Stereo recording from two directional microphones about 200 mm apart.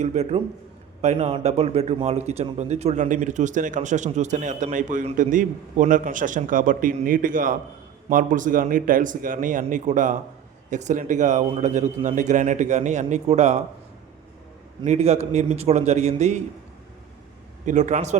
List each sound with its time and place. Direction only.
0.0 s a man's voice: 35° right (ahead or behind)
14.8 s a man's voice: 30° right (ahead or behind)
17.7 s a man's voice: 35° right (ahead or behind)